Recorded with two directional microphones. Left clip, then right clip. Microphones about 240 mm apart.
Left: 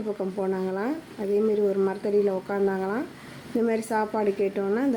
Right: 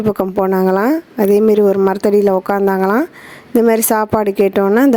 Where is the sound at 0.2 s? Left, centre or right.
Right.